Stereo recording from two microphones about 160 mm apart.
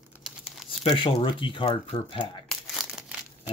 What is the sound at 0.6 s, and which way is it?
Speech, 35° left (ahead or behind).